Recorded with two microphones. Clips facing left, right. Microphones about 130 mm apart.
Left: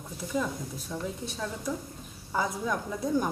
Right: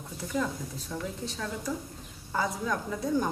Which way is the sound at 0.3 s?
20° left (ahead or behind).